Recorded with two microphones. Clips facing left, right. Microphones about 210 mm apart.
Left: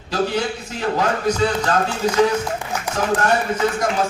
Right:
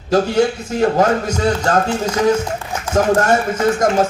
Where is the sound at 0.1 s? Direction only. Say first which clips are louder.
Right 7 dB; 45° right (ahead or behind).